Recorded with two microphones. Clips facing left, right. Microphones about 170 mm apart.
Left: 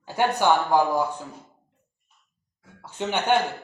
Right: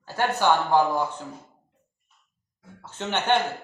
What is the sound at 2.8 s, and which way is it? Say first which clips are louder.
Speech: left 2 dB; 10° left (ahead or behind).